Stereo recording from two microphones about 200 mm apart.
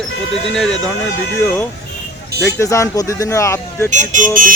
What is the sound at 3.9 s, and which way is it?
Speech, 40° right (ahead or behind).